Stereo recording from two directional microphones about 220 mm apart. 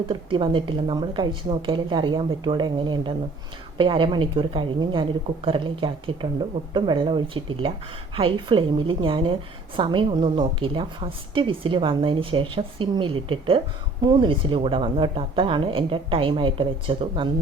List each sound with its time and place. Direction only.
0.1 s a woman's voice: 20° right (ahead or behind)